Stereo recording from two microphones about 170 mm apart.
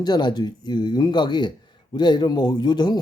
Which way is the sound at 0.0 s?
25° left (ahead or behind).